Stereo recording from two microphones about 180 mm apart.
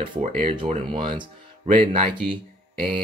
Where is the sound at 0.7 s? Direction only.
30° right (ahead or behind).